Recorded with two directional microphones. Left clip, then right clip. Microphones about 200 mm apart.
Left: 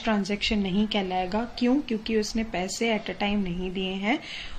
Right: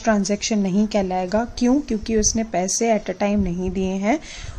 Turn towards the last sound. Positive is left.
turn(degrees=-45)  # may be behind; listen again after turning